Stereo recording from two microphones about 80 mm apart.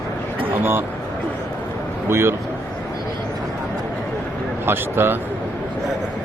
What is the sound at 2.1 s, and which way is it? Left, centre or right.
Speech, right.